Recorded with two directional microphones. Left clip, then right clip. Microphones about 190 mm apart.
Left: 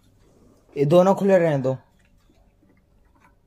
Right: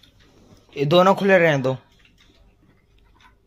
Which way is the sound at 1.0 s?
15° left (ahead or behind).